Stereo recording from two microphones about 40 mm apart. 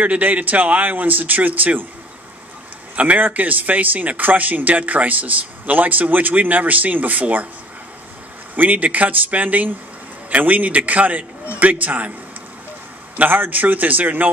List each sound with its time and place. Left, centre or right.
0.0 s speech: right
3.0 s speech: right
8.5 s a man's voice: right
13.2 s speech: right